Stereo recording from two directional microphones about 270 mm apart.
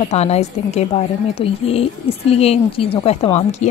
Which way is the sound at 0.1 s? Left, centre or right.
Left.